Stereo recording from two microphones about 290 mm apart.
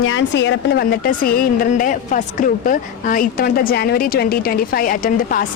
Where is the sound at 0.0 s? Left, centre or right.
Left.